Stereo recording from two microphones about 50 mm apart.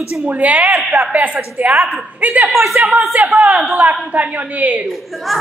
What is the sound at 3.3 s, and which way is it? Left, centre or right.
A woman's voice, right.